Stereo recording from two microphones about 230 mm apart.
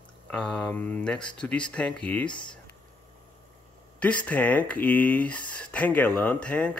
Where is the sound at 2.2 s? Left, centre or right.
Centre.